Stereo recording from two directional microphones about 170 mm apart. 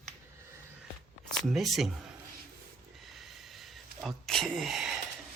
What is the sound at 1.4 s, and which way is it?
Speech, centre (ahead or behind).